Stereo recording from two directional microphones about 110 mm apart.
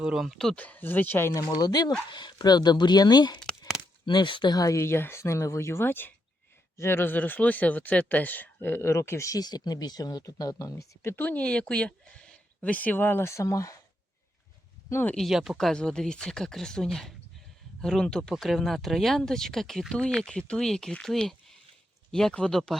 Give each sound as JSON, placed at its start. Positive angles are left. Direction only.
{"t": 0.0, "sound": "speech", "side_deg": -5}
{"t": 0.6, "sound": "speech", "side_deg": 15}
{"t": 11.2, "sound": "speech", "side_deg": 15}
{"t": 14.8, "sound": "speech", "side_deg": 20}
{"t": 15.1, "sound": "speech", "side_deg": 0}